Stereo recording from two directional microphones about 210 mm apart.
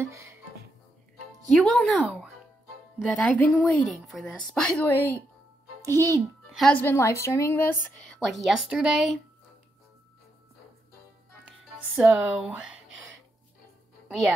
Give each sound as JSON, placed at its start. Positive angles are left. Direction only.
{"t": 1.5, "sound": "a woman's voice", "side_deg": 5}
{"t": 5.8, "sound": "a child's voice", "side_deg": -15}
{"t": 6.5, "sound": "a woman's voice", "side_deg": 5}
{"t": 8.3, "sound": "a woman's voice", "side_deg": 0}
{"t": 11.4, "sound": "speech", "side_deg": -5}